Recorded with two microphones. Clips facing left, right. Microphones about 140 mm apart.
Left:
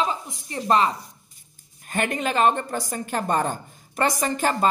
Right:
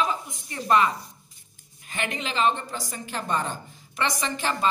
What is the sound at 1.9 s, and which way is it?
A woman's voice, 50° left (ahead or behind).